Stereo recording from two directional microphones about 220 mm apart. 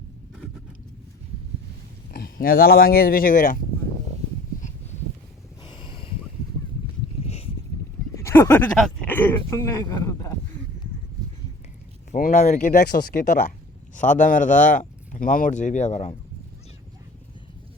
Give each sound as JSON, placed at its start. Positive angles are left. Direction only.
{"t": 2.1, "sound": "speech", "side_deg": 40}
{"t": 5.6, "sound": "a sound", "side_deg": 20}
{"t": 8.1, "sound": "speech", "side_deg": 10}
{"t": 12.1, "sound": "speech", "side_deg": 35}